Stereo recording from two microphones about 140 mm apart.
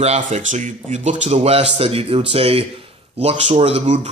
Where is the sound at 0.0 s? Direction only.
55° right (ahead or behind).